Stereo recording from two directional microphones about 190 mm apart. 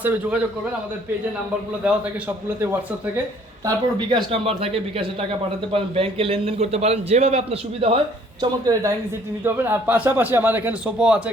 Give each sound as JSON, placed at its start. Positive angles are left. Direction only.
{"t": 0.0, "sound": "a man's voice", "side_deg": -5}
{"t": 1.8, "sound": "a man's voice", "side_deg": -5}
{"t": 3.7, "sound": "a man's voice", "side_deg": -25}
{"t": 8.6, "sound": "a man's voice", "side_deg": -20}